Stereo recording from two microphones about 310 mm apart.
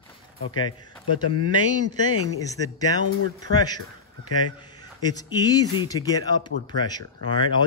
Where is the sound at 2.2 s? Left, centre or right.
Centre.